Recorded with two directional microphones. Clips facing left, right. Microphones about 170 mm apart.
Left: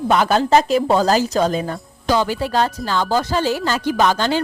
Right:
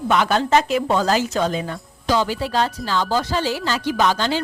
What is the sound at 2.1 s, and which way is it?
Speech, 50° left (ahead or behind).